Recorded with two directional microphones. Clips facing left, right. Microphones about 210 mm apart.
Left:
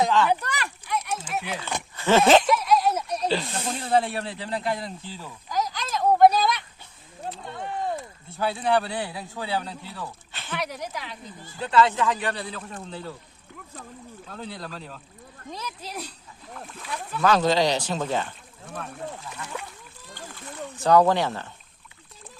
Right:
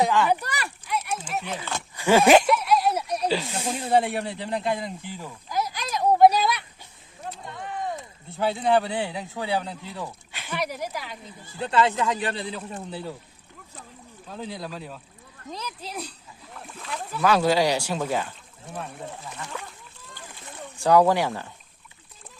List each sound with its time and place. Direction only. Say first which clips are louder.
0.0 s a sound: even; 10° right (ahead or behind)
2.0 s snake: right 1 dB; 15° right (ahead or behind)
7.4 s a sound: left 2 dB; 30° left (ahead or behind)
7.9 s speech: even; 20° right (ahead or behind); by 11.2 s 5° right (ahead or behind)
11.6 s speech: left 1 dB; 25° right (ahead or behind)
14.3 s speech: right 3 dB; 10° right (ahead or behind)
17.1 s speech: even; 5° right (ahead or behind)
20.7 s speech: even; 10° right (ahead or behind)